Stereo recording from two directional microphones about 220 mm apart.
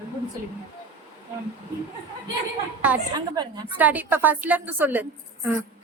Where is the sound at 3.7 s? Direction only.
5° right (ahead or behind).